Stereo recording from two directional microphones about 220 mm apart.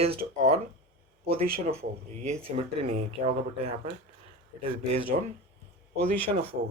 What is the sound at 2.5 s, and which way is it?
Speech, 30° right (ahead or behind).